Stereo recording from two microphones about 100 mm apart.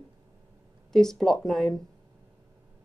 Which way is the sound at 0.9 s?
5° left (ahead or behind).